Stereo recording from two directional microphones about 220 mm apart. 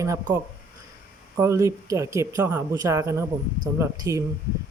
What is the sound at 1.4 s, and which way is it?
Speech, 15° right (ahead or behind).